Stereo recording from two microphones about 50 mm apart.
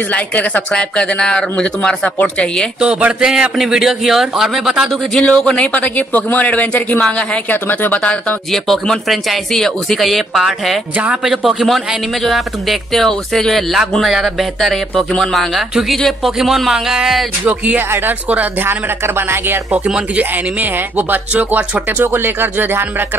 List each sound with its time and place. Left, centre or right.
0.1 s a woman's voice: left
2.8 s a man's voice: centre
5.1 s speech: centre
7.4 s a woman's voice: left
8.0 s speech: left
8.5 s a man's voice: centre
14.0 s a man's voice: centre
17.7 s speech: right
18.7 s speech: right
21.5 s speech: right
21.9 s speech: right